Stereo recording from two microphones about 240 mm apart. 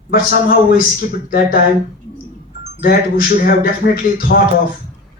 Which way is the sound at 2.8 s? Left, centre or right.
Left.